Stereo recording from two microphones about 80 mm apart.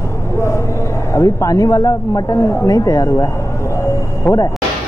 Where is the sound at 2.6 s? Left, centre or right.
Left.